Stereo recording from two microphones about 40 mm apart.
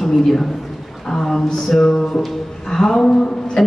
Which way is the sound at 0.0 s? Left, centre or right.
Centre.